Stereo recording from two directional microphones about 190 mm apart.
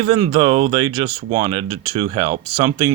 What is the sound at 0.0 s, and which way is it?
Speech, 25° right (ahead or behind).